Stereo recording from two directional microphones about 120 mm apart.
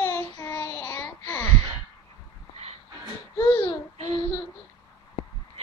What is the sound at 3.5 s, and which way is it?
Child singing, 45° left (ahead or behind).